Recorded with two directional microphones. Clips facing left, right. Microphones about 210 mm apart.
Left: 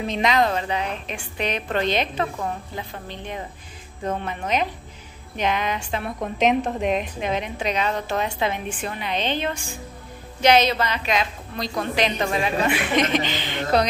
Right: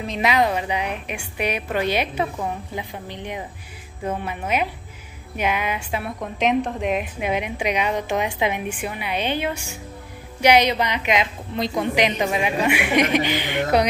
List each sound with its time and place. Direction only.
0.0 s a woman's voice: 5° right (ahead or behind)